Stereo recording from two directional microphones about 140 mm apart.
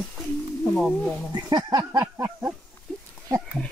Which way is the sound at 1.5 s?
30° right (ahead or behind).